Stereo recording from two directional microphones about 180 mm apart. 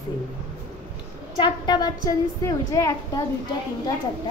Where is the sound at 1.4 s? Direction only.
25° left (ahead or behind).